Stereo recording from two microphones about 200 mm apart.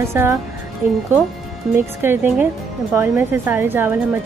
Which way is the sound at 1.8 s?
10° right (ahead or behind).